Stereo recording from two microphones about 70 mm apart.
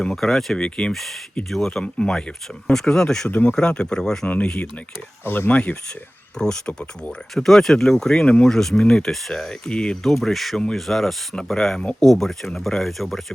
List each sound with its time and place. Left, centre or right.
0.0 s speech: centre
3.2 s speech: left
5.2 s speech: left
6.4 s speech: centre